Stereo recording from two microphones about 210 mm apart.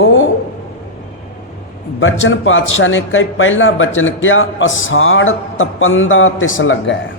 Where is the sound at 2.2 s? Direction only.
65° left (ahead or behind).